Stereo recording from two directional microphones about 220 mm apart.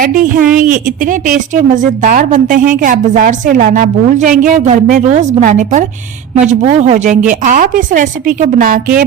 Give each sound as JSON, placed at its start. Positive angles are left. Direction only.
{"t": 0.0, "sound": "a woman's voice", "side_deg": -40}